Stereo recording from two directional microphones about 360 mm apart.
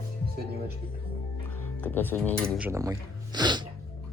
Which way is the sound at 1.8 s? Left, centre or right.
Centre.